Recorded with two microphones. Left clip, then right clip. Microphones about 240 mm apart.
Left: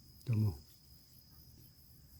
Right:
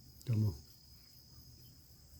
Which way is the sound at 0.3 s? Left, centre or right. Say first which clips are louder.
Even; centre.